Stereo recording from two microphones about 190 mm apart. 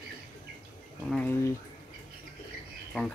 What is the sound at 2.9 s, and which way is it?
Speech, 5° left (ahead or behind).